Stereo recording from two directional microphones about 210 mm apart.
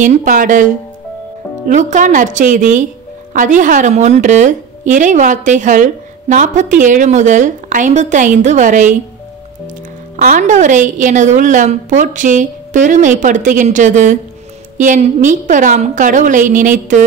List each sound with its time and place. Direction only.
0.0 s a woman's voice: 35° right (ahead or behind)
1.7 s a woman's voice: 35° right (ahead or behind)
10.1 s a woman's voice: 40° right (ahead or behind)